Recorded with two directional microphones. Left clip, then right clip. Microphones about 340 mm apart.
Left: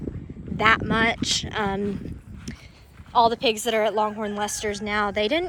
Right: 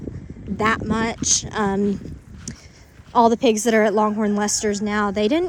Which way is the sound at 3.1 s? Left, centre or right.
Right.